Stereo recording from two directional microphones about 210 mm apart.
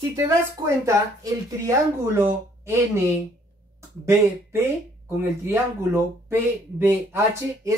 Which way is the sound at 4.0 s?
10° right (ahead or behind).